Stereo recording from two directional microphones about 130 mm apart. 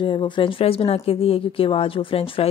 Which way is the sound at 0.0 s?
40° left (ahead or behind).